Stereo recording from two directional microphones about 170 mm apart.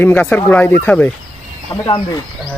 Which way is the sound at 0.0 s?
10° left (ahead or behind).